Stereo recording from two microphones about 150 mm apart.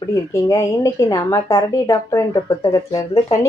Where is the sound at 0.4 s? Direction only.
20° left (ahead or behind).